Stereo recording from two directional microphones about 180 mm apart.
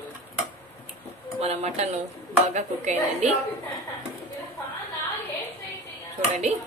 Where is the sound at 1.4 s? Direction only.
35° right (ahead or behind).